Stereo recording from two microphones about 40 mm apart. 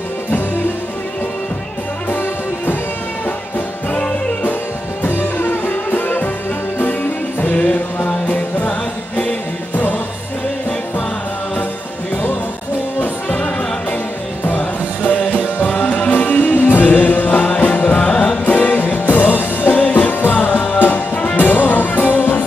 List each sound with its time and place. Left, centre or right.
2.0 s music: left
5.0 s music: left
8.6 s music: left
14.5 s music: left
18.0 s music: left
18.4 s music: left
19.7 s music: left
21.4 s music: left